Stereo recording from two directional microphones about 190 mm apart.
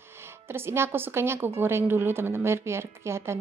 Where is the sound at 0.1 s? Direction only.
10° right (ahead or behind).